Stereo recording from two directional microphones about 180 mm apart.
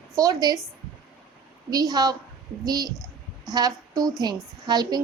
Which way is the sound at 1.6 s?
20° right (ahead or behind).